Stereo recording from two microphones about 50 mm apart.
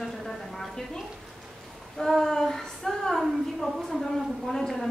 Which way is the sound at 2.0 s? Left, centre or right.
Centre.